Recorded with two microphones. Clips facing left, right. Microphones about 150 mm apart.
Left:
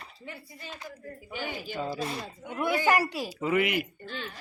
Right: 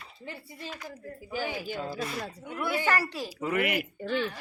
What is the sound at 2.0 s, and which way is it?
Speech, 30° left (ahead or behind).